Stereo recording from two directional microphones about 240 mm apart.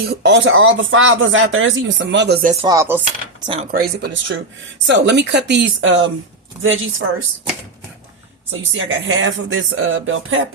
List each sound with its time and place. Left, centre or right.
0.0 s speech: right
0.4 s speech: right
2.6 s chopping: centre
3.4 s speech: right
3.7 s speech: right
8.5 s speech: right